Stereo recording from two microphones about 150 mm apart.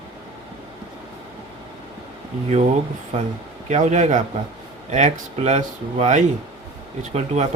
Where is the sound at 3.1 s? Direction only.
50° right (ahead or behind).